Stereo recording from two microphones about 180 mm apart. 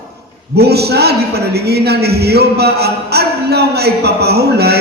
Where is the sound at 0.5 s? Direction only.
65° right (ahead or behind).